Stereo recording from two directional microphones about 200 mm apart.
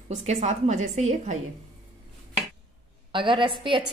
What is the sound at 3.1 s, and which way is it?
Speech, 25° right (ahead or behind).